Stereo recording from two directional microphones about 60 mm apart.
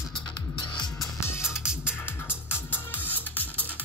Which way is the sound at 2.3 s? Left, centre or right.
Left.